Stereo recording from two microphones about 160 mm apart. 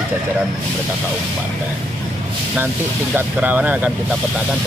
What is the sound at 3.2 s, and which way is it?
Speech, 10° right (ahead or behind).